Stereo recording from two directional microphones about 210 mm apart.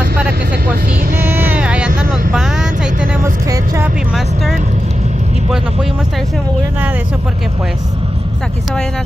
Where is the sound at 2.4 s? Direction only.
5° right (ahead or behind).